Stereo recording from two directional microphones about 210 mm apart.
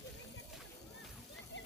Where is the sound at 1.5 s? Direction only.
60° left (ahead or behind).